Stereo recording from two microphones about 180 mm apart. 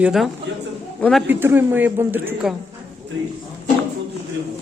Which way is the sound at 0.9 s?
5° left (ahead or behind).